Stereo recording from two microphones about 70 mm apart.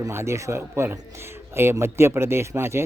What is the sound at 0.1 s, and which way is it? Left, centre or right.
Speech, right.